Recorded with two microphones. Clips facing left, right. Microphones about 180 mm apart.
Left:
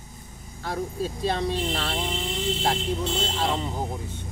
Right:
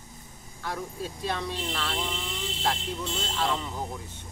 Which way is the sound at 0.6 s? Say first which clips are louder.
Left 5 dB; 30° left (ahead or behind).